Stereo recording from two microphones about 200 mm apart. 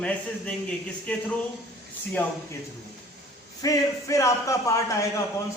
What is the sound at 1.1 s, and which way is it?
Speech, 5° left (ahead or behind).